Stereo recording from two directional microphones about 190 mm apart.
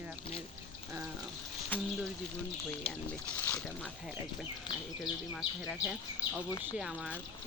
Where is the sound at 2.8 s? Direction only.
30° left (ahead or behind).